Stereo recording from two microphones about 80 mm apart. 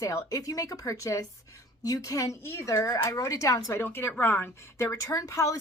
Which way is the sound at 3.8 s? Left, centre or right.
Left.